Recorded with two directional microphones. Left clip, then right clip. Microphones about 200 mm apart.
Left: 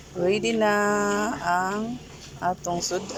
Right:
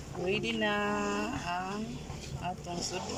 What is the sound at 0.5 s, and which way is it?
Speech, 20° left (ahead or behind).